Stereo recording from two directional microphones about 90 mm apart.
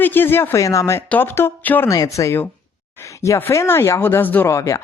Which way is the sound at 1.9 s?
40° left (ahead or behind).